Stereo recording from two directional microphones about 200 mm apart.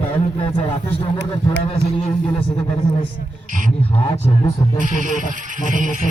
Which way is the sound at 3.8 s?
30° left (ahead or behind).